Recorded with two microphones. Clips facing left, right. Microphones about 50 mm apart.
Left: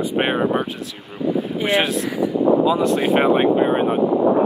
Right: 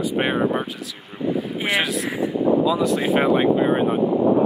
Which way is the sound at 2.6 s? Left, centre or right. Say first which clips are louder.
Left 2 dB; left.